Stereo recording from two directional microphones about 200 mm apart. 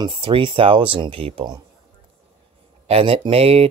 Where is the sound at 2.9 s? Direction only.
30° right (ahead or behind).